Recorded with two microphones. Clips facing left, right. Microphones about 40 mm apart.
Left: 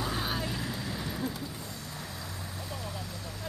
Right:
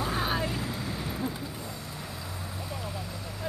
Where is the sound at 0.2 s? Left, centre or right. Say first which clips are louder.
Right 4 dB; centre.